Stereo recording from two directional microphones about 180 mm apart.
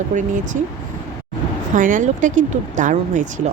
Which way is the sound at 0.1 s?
45° right (ahead or behind).